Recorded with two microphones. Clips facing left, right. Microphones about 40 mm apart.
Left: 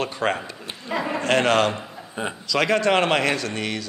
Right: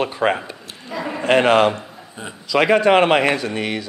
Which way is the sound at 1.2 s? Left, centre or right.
Centre.